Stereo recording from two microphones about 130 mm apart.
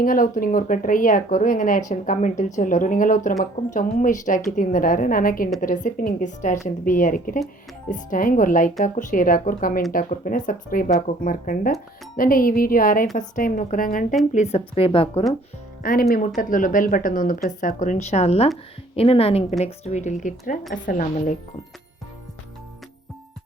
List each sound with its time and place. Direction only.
0.0 s speech: 90° left
1.9 s a woman's voice: 70° left (ahead or behind)
6.7 s speech: 90° left
14.3 s speech: 50° left (ahead or behind)
15.8 s a woman's voice: 90° left; by 20.3 s 70° left (ahead or behind)
20.8 s a woman's voice: 85° left